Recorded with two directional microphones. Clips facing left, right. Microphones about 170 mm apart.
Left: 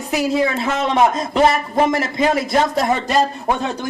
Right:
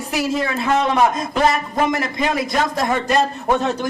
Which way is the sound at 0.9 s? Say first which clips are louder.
Left 2 dB; 25° left (ahead or behind).